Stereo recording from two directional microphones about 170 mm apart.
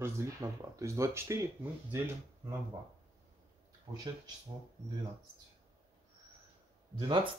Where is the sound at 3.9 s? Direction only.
20° right (ahead or behind).